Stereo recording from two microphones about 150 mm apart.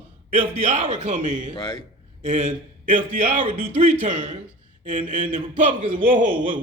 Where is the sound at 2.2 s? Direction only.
55° right (ahead or behind).